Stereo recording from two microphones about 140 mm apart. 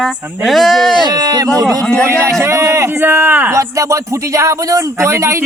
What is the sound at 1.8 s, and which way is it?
Speech, 5° left (ahead or behind).